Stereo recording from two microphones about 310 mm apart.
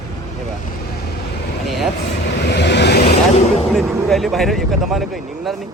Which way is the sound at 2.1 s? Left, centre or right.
Left.